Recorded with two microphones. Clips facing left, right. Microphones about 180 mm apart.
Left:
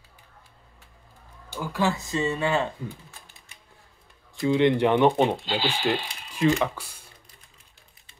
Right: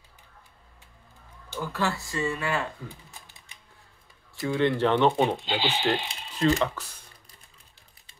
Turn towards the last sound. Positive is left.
turn(degrees=10)  # may be behind; listen again after turning